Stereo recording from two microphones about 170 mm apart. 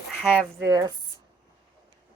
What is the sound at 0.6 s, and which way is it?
Speech, 20° right (ahead or behind).